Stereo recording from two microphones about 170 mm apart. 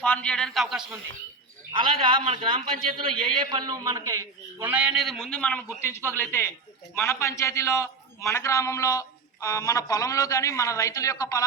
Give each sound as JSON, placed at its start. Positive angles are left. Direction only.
{"t": 0.0, "sound": "a man's voice", "side_deg": 10}
{"t": 1.7, "sound": "a man's voice", "side_deg": -30}